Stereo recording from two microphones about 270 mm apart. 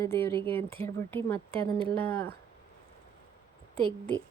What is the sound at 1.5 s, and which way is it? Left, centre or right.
Speech, centre.